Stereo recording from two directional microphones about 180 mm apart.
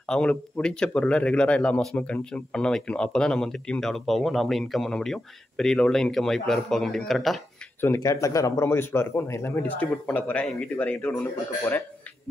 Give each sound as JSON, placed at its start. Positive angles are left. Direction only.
{"t": 0.0, "sound": "speech", "side_deg": 5}
{"t": 7.8, "sound": "speech", "side_deg": 15}